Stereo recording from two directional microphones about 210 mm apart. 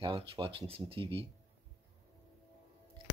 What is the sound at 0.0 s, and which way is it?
Speech, 25° right (ahead or behind).